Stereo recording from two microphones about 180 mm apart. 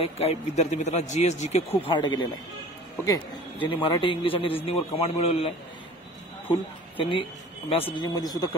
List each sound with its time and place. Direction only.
0.0 s speech: 35° left (ahead or behind)
3.6 s a man's voice: 30° left (ahead or behind)
6.5 s a man's voice: 30° left (ahead or behind)